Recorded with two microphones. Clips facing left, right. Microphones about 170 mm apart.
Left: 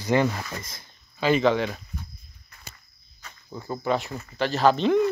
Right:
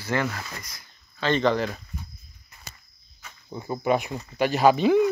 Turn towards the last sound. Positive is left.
turn(degrees=-5)  # may be behind; listen again after turning